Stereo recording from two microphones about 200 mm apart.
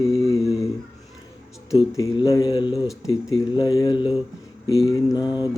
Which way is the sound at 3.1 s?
20° left (ahead or behind).